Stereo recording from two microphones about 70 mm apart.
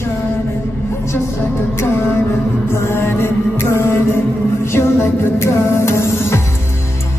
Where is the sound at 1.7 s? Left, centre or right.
Left.